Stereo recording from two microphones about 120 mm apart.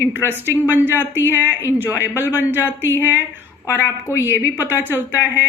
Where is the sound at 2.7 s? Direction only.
20° left (ahead or behind).